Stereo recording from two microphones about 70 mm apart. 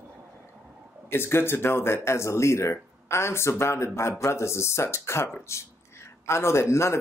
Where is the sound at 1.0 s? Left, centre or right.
Left.